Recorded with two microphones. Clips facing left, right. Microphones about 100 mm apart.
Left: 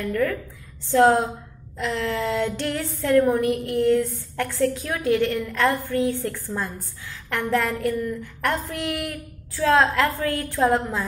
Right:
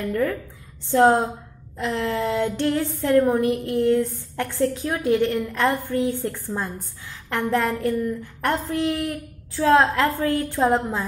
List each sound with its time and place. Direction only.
0.1 s a woman's voice: 30° right (ahead or behind)